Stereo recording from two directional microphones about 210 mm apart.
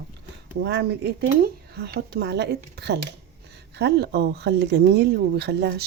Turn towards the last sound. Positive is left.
turn(degrees=-50)  # may be behind; listen again after turning